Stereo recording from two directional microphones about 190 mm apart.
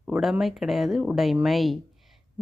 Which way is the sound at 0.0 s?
Centre (ahead or behind).